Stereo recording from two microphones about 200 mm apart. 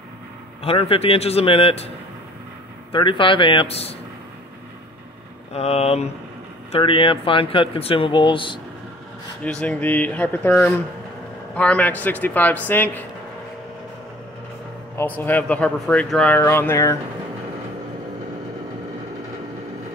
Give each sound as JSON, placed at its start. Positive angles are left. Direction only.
{"t": 0.6, "sound": "speech", "side_deg": 30}
{"t": 2.9, "sound": "speech", "side_deg": 25}
{"t": 5.5, "sound": "speech", "side_deg": 30}
{"t": 9.4, "sound": "speech", "side_deg": 5}
{"t": 15.0, "sound": "speech", "side_deg": 10}